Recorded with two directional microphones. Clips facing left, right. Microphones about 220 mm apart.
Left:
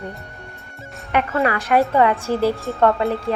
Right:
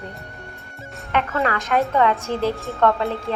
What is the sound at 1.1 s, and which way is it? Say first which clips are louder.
Speech: left 2 dB; 10° left (ahead or behind).